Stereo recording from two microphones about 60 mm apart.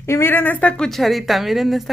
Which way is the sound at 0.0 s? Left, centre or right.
Left.